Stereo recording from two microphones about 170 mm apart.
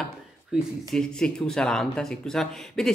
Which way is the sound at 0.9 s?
5° left (ahead or behind).